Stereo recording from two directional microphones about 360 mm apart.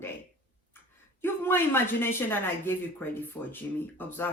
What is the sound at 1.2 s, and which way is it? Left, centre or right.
Speech, centre.